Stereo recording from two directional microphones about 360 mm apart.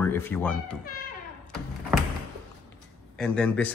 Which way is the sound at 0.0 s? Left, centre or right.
Centre.